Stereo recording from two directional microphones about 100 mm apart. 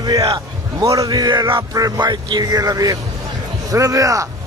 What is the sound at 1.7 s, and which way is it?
Speech, 35° right (ahead or behind).